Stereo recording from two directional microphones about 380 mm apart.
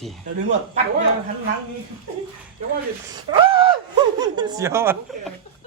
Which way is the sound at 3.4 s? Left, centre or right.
Centre.